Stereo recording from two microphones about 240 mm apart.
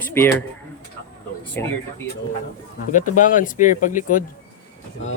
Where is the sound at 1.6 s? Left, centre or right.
Centre.